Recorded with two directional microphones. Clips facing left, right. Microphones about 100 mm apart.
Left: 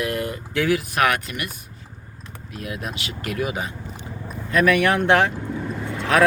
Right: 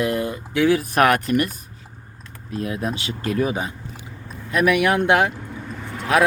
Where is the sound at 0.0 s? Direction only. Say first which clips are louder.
Right 3 dB; 25° right (ahead or behind).